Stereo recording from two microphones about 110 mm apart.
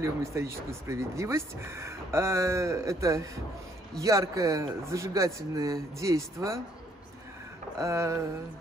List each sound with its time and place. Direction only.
0.0 s speech: 25° right (ahead or behind)
7.8 s speech: 25° right (ahead or behind)